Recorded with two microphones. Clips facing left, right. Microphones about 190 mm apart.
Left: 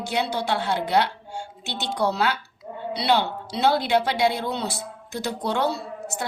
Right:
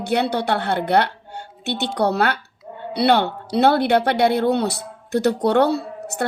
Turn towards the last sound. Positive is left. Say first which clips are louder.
# right 6 dB
turn(degrees=-60)  # may be behind; listen again after turning